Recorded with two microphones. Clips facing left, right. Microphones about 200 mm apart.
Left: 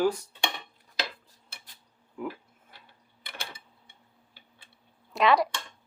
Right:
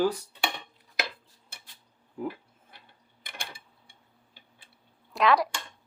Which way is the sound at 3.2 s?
20° left (ahead or behind).